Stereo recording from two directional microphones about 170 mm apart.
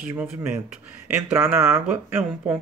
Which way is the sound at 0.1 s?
15° right (ahead or behind).